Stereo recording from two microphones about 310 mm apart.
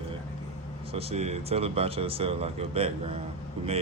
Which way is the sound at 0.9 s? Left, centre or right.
Centre.